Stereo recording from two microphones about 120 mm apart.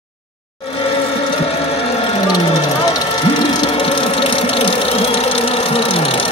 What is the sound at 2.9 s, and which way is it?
Engine, 40° left (ahead or behind).